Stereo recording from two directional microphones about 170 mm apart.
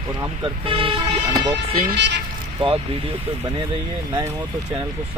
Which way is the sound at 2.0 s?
90° right.